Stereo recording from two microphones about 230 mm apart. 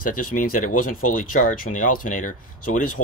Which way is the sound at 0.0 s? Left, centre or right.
Left.